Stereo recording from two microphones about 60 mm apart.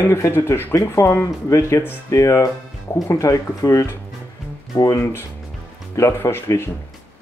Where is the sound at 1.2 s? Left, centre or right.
Left.